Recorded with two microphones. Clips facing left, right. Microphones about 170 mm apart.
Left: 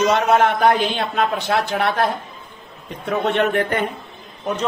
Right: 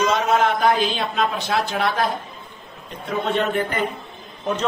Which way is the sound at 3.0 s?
75° left (ahead or behind).